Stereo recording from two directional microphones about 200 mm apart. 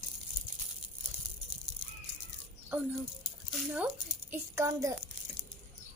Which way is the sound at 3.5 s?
5° right (ahead or behind).